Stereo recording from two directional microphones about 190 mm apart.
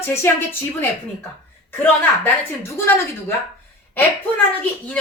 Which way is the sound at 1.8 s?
10° left (ahead or behind).